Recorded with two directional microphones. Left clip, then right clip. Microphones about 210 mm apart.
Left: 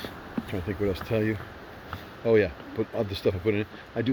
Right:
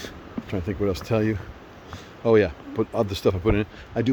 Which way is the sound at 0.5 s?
25° right (ahead or behind).